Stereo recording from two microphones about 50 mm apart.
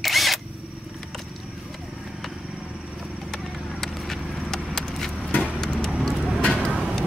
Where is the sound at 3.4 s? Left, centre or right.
Centre.